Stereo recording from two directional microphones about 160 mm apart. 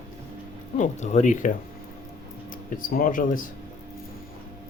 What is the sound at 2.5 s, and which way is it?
Speech, 60° left (ahead or behind).